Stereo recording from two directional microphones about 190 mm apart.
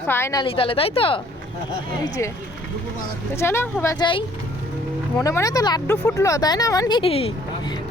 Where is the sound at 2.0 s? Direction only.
15° left (ahead or behind).